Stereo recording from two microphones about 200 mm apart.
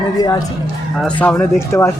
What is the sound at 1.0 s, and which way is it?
Speech, 5° left (ahead or behind).